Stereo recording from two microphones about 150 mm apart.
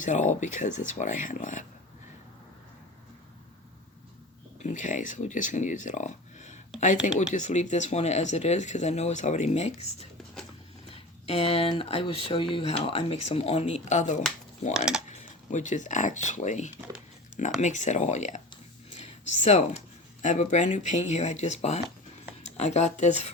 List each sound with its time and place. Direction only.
0.0 s speech: 55° left (ahead or behind)
4.6 s speech: 55° left (ahead or behind)